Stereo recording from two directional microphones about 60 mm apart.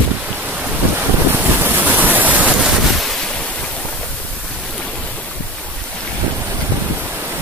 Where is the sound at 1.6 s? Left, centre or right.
Right.